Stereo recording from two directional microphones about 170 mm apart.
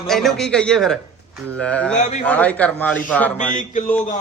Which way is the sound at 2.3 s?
10° left (ahead or behind).